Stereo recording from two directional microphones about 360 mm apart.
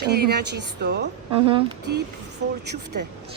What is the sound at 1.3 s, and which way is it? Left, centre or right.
Speech, centre.